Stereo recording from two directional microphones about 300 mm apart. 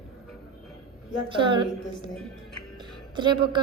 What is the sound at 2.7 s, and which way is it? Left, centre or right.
Music, centre.